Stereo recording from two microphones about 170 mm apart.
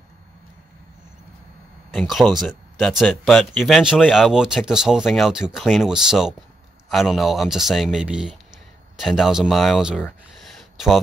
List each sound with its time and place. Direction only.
2.0 s speech: centre (ahead or behind)